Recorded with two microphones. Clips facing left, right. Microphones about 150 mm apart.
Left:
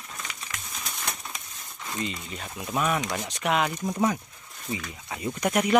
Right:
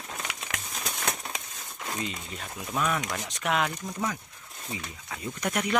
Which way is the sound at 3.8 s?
25° left (ahead or behind).